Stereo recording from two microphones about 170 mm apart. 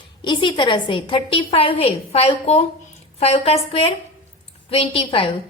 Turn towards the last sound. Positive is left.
turn(degrees=30)  # may be behind; listen again after turning